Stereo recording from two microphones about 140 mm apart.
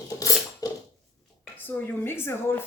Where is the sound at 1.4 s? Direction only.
15° left (ahead or behind).